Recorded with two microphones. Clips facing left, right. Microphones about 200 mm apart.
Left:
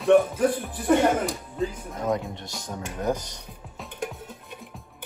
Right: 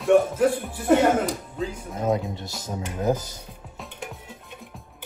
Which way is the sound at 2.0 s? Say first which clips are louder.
Right 2 dB; 25° right (ahead or behind).